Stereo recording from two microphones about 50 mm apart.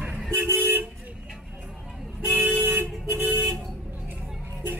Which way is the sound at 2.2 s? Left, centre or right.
Right.